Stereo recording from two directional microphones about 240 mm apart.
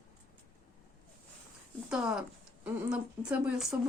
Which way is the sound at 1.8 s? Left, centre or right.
Centre.